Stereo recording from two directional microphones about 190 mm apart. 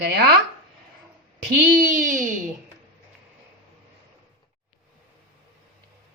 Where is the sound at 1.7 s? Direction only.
45° right (ahead or behind).